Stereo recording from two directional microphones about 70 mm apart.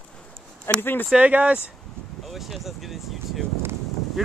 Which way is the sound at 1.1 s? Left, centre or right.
Centre.